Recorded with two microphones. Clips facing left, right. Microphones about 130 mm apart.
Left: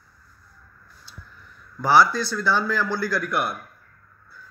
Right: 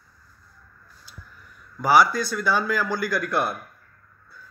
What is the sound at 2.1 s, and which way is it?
Speech, 45° right (ahead or behind).